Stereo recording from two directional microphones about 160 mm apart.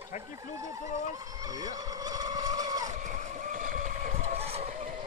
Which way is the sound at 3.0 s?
55° right (ahead or behind).